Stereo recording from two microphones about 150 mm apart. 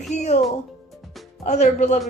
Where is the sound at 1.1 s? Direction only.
Centre (ahead or behind).